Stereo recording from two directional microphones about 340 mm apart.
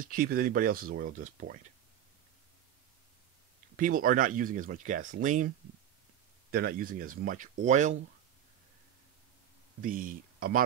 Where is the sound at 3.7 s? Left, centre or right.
Right.